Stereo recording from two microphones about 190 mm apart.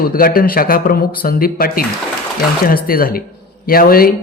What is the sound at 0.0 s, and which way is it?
Speech, 50° left (ahead or behind).